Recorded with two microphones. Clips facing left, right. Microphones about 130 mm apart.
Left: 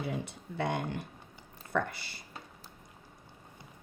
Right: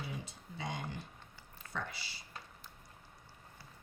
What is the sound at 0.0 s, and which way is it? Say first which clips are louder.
A woman's voice: left 8 dB; 60° left (ahead or behind).